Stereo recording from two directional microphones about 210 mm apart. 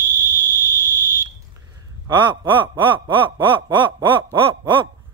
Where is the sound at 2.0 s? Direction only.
20° right (ahead or behind).